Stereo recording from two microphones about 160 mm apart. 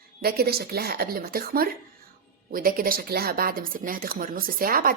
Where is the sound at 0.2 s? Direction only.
75° right (ahead or behind).